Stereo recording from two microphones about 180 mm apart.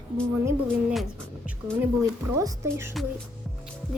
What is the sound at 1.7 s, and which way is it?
A child's voice, 20° right (ahead or behind).